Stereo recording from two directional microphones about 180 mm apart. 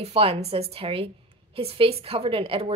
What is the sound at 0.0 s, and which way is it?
A woman's voice, 35° right (ahead or behind).